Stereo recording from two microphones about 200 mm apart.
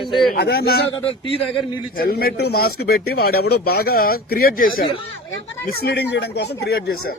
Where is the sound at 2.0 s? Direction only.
50° left (ahead or behind).